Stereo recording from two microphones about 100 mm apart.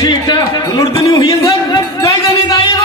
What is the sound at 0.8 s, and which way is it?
Speech, 30° left (ahead or behind).